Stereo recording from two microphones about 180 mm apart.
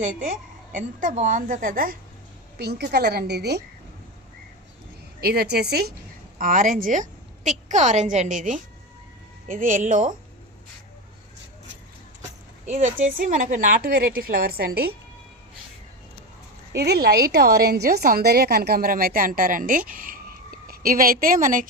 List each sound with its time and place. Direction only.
0.3 s a woman's voice: 45° right (ahead or behind)
2.6 s a woman's voice: 65° right (ahead or behind)
5.2 s a woman's voice: 60° right (ahead or behind)
6.4 s a woman's voice: 50° right (ahead or behind)
12.6 s a woman's voice: 40° right (ahead or behind); by 14.9 s 60° right (ahead or behind)
16.7 s a woman's voice: 65° right (ahead or behind); by 21.7 s 50° right (ahead or behind)